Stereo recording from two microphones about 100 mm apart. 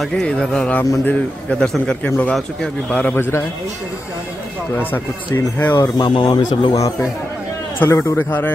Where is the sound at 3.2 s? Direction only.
25° left (ahead or behind).